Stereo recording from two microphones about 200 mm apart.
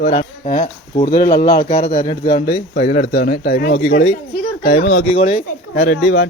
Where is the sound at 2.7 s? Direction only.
50° left (ahead or behind).